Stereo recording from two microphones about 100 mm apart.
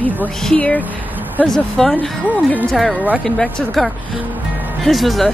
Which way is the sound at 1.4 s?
5° left (ahead or behind).